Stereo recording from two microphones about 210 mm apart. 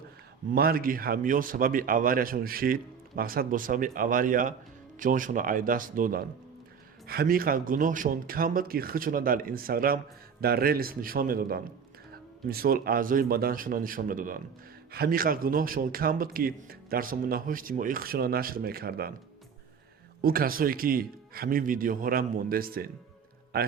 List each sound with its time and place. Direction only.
0.5 s a man's voice: 45° right (ahead or behind)
20.2 s a man's voice: 45° right (ahead or behind)